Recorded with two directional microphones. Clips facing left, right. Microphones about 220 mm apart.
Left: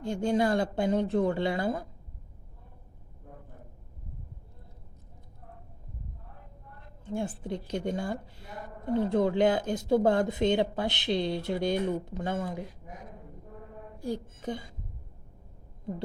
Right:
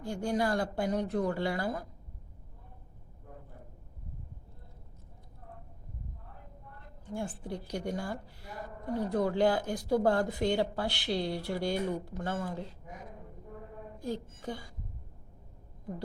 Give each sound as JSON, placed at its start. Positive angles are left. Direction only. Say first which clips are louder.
{"t": 0.0, "sound": "speech", "louder": "left 4 dB", "side_deg": 20}
{"t": 7.0, "sound": "speech", "louder": "left 4 dB", "side_deg": 20}
{"t": 14.0, "sound": "speech", "louder": "left 3 dB", "side_deg": 15}